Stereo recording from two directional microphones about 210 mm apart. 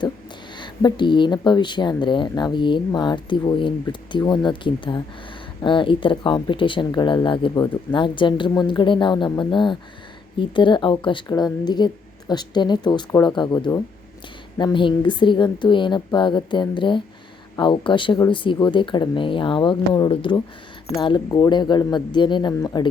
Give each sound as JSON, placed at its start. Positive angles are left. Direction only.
{"t": 0.6, "sound": "speech", "side_deg": 20}